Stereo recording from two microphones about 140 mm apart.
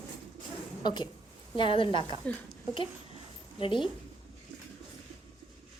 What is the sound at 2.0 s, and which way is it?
Speech, 35° right (ahead or behind).